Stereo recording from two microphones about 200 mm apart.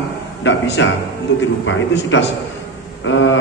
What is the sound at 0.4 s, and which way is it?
A man's voice, 65° left (ahead or behind).